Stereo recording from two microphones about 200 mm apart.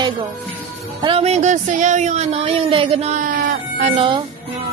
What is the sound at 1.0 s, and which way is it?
Speech, 30° right (ahead or behind).